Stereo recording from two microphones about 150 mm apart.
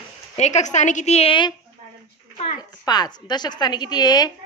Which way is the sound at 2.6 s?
30° left (ahead or behind).